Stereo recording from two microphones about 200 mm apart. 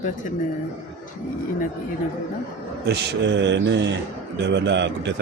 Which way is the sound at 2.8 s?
60° right (ahead or behind).